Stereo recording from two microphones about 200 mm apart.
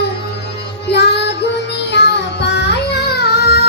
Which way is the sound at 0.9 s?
60° left (ahead or behind).